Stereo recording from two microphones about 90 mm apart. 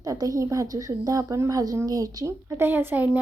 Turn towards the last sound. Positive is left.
turn(degrees=-20)  # may be behind; listen again after turning